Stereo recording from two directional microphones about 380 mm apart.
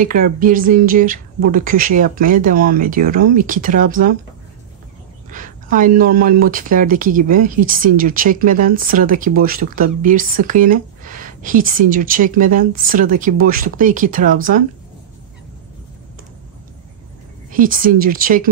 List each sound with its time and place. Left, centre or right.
0.0 s speech: right
5.3 s speech: right
17.5 s speech: right